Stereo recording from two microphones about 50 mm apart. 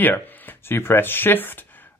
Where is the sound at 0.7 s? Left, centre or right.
Left.